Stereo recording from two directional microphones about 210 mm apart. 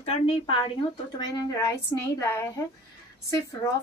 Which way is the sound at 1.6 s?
15° left (ahead or behind).